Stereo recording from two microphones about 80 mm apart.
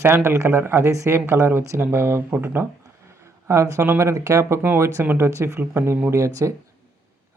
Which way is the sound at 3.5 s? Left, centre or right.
Right.